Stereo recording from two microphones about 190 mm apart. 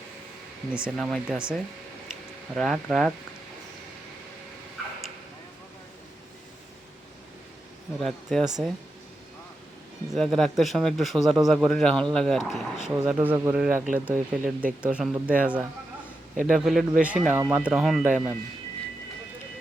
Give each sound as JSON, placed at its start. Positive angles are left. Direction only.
{"t": 0.7, "sound": "a man's voice", "side_deg": -5}
{"t": 8.0, "sound": "a man's voice", "side_deg": 0}
{"t": 10.1, "sound": "a man's voice", "side_deg": 0}